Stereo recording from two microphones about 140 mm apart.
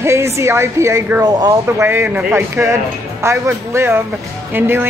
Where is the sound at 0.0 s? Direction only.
20° right (ahead or behind).